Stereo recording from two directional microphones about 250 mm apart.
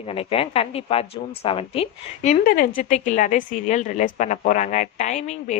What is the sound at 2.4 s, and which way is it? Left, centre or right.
A woman's voice, left.